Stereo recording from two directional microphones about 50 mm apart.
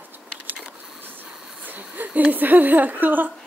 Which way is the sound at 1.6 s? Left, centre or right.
Right.